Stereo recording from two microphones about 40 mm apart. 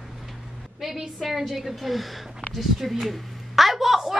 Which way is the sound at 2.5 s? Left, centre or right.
Centre.